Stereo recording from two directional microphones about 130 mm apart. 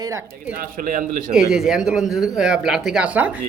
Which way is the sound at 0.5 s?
90° right.